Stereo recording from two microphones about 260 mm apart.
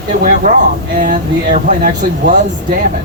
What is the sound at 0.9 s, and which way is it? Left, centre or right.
Speech, right.